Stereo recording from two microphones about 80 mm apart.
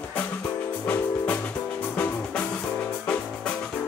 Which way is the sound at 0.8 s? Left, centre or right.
Centre.